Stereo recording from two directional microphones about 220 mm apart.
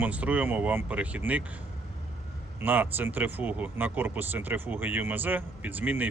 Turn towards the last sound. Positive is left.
turn(degrees=-10)  # may be behind; listen again after turning